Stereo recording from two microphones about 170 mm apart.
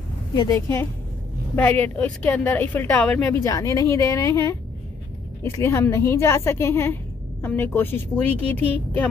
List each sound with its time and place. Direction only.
0.3 s a woman's voice: 20° left (ahead or behind)
3.4 s a woman's voice: 20° left (ahead or behind)